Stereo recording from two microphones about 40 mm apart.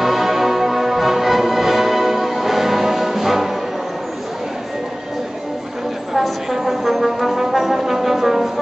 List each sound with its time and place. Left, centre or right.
0.0 s music: centre
6.1 s brass instrument: centre